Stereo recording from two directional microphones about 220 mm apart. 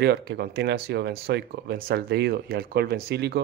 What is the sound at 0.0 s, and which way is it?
Speech, 50° right (ahead or behind).